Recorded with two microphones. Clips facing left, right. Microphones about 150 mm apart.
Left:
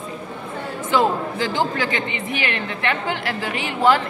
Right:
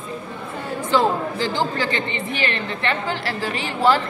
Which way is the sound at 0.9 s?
15° left (ahead or behind).